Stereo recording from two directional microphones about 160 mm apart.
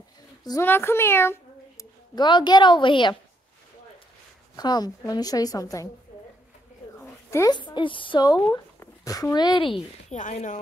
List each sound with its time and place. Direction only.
0.4 s a woman's voice: 25° left (ahead or behind)
2.1 s a woman's voice: 30° left (ahead or behind)
4.6 s a woman's voice: 25° left (ahead or behind)
7.2 s a woman's voice: 20° left (ahead or behind)
10.0 s speech: 50° left (ahead or behind)